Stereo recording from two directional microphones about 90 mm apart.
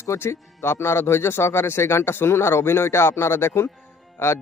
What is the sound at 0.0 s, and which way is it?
A man's voice, 30° left (ahead or behind).